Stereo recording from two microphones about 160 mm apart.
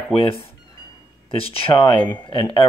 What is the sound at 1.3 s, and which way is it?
Speech, 35° left (ahead or behind).